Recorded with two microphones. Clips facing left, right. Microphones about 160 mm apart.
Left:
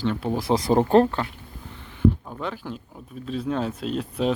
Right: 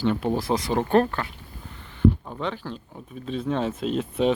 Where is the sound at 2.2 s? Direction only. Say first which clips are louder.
Right 1 dB; centre (ahead or behind).